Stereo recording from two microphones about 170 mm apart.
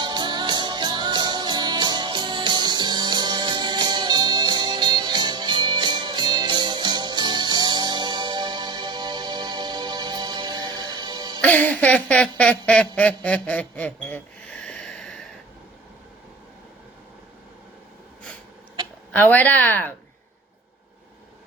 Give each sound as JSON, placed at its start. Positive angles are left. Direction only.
{"t": 0.0, "sound": "music", "side_deg": -25}
{"t": 11.3, "sound": "a sound", "side_deg": 10}
{"t": 19.1, "sound": "speech", "side_deg": 10}